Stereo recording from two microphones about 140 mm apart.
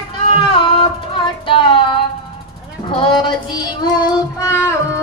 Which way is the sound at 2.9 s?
35° left (ahead or behind).